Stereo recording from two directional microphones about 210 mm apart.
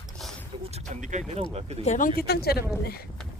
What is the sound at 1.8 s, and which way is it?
Speech, 35° left (ahead or behind).